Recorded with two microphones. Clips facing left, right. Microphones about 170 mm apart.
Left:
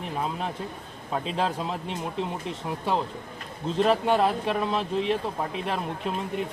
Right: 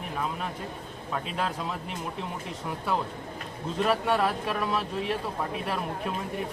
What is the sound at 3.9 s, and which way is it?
Speech, 25° left (ahead or behind).